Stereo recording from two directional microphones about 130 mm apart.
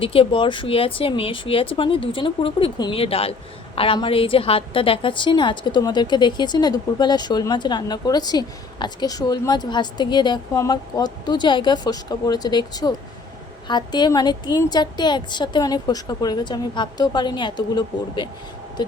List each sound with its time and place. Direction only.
0.0 s a woman's voice: 45° left (ahead or behind)